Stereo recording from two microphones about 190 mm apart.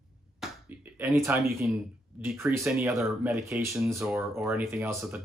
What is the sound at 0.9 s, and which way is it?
Speech, 15° right (ahead or behind).